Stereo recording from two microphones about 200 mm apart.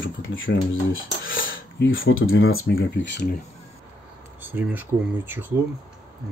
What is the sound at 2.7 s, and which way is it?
Speech, 65° left (ahead or behind).